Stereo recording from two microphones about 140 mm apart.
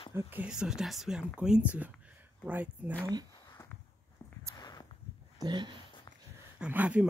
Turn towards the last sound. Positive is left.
turn(degrees=-10)  # may be behind; listen again after turning